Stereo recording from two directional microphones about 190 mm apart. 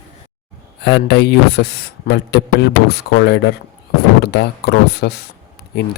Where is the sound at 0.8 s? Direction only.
60° left (ahead or behind).